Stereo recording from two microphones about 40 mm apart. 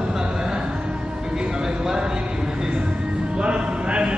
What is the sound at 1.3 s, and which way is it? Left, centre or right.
Vehicle, centre.